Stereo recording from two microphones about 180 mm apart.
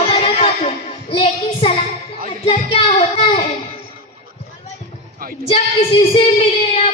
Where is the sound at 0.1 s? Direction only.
35° left (ahead or behind).